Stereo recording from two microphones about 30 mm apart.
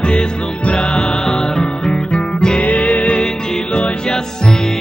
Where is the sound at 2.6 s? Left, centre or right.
Left.